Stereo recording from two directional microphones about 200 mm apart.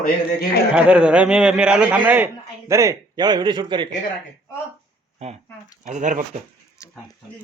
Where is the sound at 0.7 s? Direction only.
5° right (ahead or behind); by 3.9 s 25° right (ahead or behind).